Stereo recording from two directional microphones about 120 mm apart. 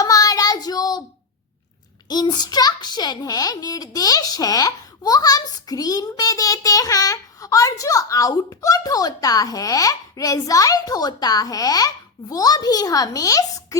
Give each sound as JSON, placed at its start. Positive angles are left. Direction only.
{"t": 0.0, "sound": "child singing", "side_deg": 30}
{"t": 2.0, "sound": "a child's voice", "side_deg": 35}